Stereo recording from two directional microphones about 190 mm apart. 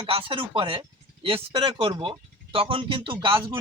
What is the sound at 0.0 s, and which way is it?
Speech, 30° right (ahead or behind).